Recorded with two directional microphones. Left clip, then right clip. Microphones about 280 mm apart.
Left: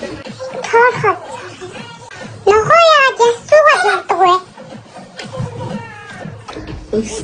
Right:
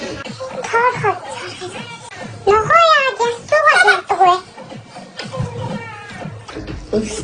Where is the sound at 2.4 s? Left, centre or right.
Centre.